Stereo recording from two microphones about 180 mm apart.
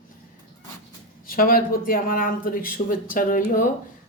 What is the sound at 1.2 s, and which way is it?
Speech, 55° left (ahead or behind).